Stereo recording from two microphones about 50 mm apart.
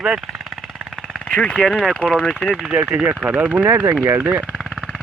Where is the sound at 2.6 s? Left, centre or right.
Centre; by 4.4 s right.